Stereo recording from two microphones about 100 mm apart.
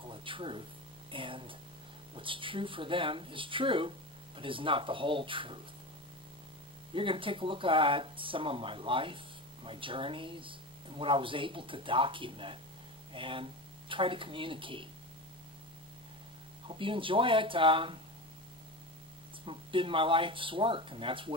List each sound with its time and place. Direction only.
0.0 s speech: 60° right (ahead or behind)
6.9 s speech: 60° right (ahead or behind)
16.6 s speech: 60° right (ahead or behind)
19.4 s speech: 60° right (ahead or behind)